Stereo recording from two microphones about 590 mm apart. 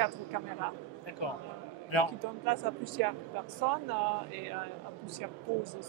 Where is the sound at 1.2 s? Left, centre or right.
Left.